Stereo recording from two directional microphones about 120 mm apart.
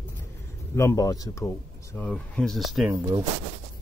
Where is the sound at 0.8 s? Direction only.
25° left (ahead or behind).